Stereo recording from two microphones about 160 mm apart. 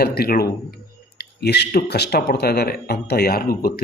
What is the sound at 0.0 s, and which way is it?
Speech, 75° left (ahead or behind).